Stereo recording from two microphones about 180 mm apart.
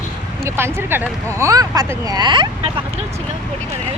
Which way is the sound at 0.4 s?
15° right (ahead or behind).